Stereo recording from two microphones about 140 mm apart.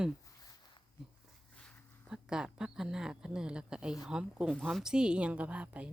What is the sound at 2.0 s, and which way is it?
Speech, 5° right (ahead or behind).